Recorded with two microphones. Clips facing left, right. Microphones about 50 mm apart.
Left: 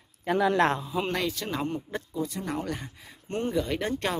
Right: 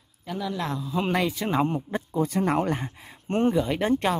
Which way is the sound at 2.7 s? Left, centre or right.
Right.